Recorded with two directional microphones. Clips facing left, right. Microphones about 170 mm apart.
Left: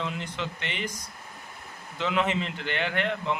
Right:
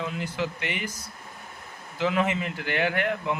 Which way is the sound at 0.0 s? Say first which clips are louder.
Right 3 dB; 5° right (ahead or behind).